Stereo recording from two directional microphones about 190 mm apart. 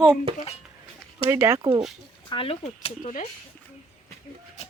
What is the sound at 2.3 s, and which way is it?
Speech, 30° left (ahead or behind).